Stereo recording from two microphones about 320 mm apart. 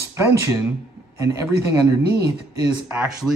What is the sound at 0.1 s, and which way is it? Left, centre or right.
Speech, centre.